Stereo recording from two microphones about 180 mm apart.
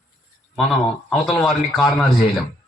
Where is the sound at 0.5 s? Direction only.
Centre (ahead or behind).